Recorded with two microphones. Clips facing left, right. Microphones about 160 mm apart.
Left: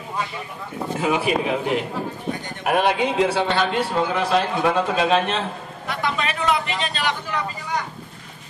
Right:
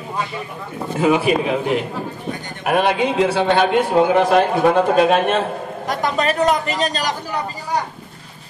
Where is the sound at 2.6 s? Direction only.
75° right (ahead or behind); by 7.9 s 35° right (ahead or behind).